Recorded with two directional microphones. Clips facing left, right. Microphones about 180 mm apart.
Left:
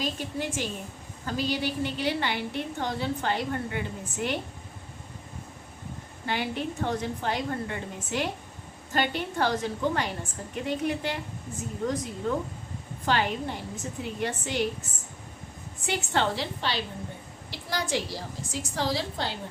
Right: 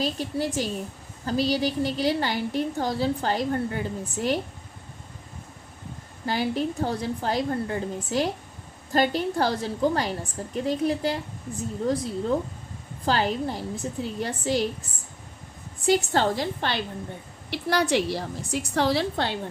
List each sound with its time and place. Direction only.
0.0 s a woman's voice: 35° right (ahead or behind)
6.2 s a woman's voice: 35° right (ahead or behind)
13.1 s a woman's voice: 35° right (ahead or behind)
15.9 s a woman's voice: 40° right (ahead or behind)
17.5 s a woman's voice: 65° right (ahead or behind)